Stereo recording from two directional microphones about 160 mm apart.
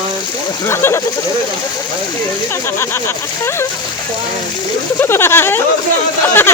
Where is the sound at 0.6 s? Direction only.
15° left (ahead or behind).